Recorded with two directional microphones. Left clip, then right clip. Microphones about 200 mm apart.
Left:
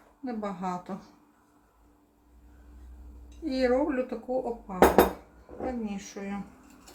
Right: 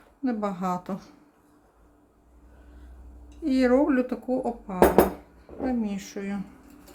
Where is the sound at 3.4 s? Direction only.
40° right (ahead or behind).